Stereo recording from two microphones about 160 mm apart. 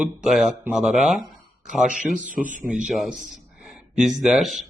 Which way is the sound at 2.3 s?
55° right (ahead or behind).